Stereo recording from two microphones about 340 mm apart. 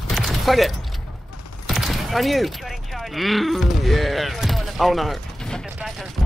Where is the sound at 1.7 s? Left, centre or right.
Centre.